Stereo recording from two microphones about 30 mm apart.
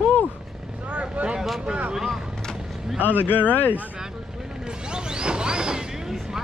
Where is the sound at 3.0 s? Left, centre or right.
Right.